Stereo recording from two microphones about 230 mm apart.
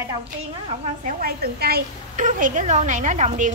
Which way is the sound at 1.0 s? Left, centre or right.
Right.